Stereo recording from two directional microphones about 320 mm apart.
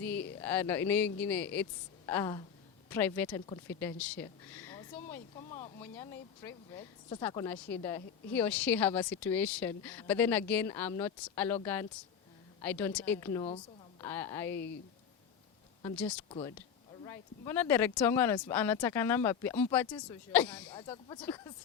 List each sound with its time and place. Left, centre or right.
0.0 s speech: centre
15.8 s speech: centre
20.7 s speech: centre